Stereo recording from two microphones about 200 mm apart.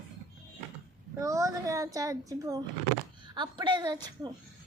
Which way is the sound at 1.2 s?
15° right (ahead or behind).